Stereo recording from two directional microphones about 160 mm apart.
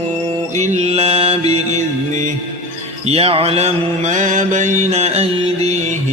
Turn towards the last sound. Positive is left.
turn(degrees=-40)  # may be behind; listen again after turning